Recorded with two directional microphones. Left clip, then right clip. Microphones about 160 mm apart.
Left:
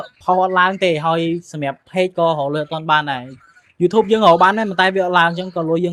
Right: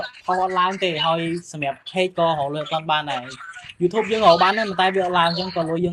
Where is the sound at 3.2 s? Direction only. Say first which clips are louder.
Right 7 dB; 35° right (ahead or behind).